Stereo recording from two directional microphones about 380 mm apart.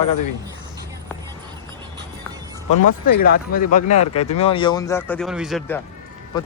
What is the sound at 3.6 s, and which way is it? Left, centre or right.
Speech, centre.